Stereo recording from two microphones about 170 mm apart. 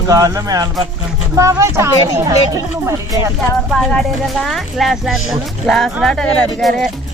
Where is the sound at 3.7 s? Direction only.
Centre (ahead or behind).